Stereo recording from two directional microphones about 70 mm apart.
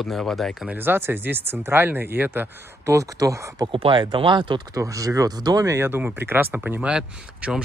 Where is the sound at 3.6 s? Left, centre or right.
Right.